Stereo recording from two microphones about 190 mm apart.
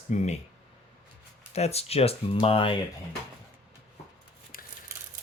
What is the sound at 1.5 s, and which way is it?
Speech, 35° left (ahead or behind).